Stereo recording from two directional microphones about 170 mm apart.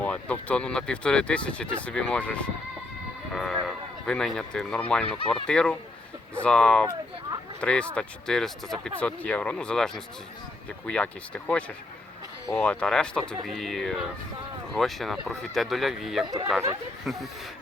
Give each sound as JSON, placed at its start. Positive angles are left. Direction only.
{"t": 0.0, "sound": "speech", "side_deg": 10}
{"t": 3.3, "sound": "run", "side_deg": 0}
{"t": 4.0, "sound": "speech", "side_deg": 5}
{"t": 5.0, "sound": "speech", "side_deg": 35}
{"t": 5.3, "sound": "speech", "side_deg": 5}
{"t": 16.2, "sound": "speech", "side_deg": -20}
{"t": 17.1, "sound": "speech", "side_deg": 0}